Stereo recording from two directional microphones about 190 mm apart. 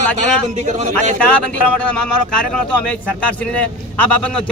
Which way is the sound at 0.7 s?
40° right (ahead or behind).